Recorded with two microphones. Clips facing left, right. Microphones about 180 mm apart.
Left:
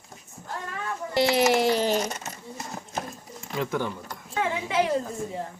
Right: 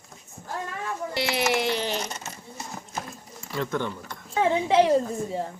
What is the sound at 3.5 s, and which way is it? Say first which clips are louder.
Speech: even; 10° left (ahead or behind).